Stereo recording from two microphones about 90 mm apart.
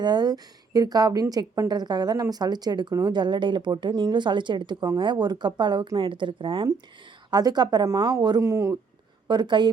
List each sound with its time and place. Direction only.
0.0 s a woman's voice: 50° right (ahead or behind)
7.3 s a woman's voice: 50° right (ahead or behind)
8.4 s speech: 35° right (ahead or behind)
9.2 s speech: 55° right (ahead or behind)